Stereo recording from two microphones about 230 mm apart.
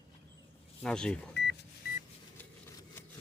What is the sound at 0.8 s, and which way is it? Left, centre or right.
Speech, centre.